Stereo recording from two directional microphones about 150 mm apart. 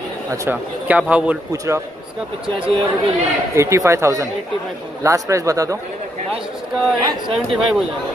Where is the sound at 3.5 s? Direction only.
20° right (ahead or behind).